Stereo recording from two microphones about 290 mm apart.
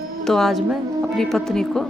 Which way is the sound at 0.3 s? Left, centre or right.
Centre.